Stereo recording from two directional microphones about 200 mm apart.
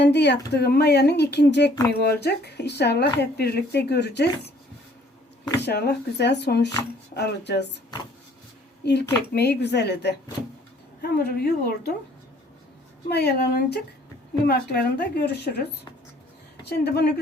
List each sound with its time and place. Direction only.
0.0 s speech: 60° left (ahead or behind)
5.5 s speech: 55° left (ahead or behind)
8.8 s a woman's voice: 55° left (ahead or behind)
13.1 s a woman's voice: 55° left (ahead or behind)
16.6 s a woman's voice: 55° left (ahead or behind)